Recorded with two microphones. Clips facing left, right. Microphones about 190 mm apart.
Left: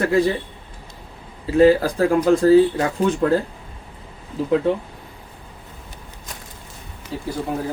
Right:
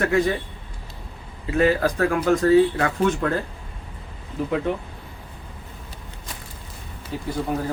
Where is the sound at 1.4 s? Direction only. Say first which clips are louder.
Left 6 dB; 30° left (ahead or behind).